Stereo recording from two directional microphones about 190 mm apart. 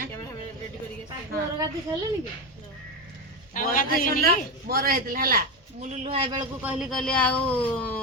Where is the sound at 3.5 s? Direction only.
45° left (ahead or behind).